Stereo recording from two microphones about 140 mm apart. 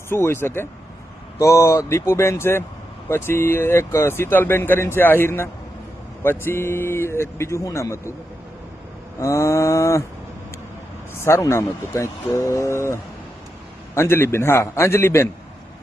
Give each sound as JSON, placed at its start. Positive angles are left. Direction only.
{"t": 0.1, "sound": "speech", "side_deg": 15}
{"t": 9.1, "sound": "a sound", "side_deg": 20}
{"t": 11.1, "sound": "speech", "side_deg": 15}